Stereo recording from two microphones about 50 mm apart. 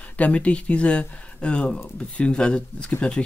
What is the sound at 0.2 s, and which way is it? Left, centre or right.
Speech, left.